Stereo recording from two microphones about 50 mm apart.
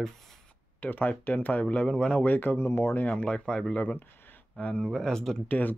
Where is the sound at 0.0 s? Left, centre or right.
Centre.